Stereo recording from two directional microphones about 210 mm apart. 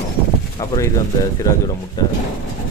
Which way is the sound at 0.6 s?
15° left (ahead or behind).